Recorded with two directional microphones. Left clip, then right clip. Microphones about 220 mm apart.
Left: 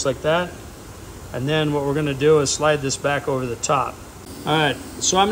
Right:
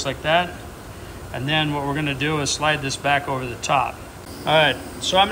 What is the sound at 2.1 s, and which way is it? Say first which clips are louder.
Speech: left 7 dB; 30° left (ahead or behind).